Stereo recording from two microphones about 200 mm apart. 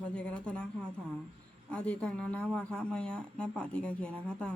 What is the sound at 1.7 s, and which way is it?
A woman's voice, 5° left (ahead or behind).